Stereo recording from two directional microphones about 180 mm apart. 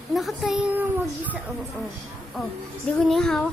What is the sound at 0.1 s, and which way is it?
A woman's voice, centre (ahead or behind).